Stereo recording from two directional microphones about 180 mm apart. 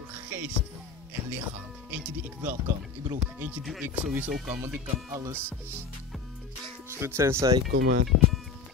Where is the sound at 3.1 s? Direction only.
10° right (ahead or behind).